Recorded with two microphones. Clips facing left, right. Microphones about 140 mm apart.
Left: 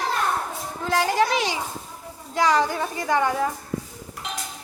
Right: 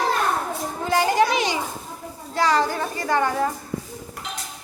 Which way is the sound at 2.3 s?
15° left (ahead or behind).